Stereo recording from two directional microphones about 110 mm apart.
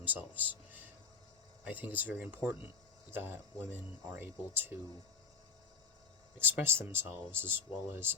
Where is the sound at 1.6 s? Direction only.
15° right (ahead or behind).